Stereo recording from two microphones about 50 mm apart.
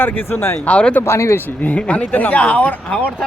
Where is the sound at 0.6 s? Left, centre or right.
Left.